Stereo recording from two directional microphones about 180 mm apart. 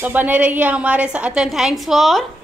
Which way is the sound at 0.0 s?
10° right (ahead or behind).